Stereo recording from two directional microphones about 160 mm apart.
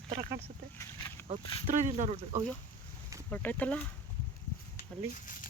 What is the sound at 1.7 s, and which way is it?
Speech, 50° right (ahead or behind).